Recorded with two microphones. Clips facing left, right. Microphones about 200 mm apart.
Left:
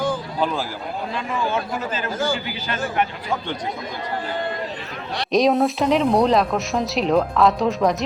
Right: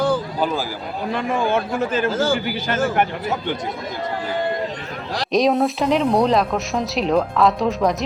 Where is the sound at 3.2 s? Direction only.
5° right (ahead or behind).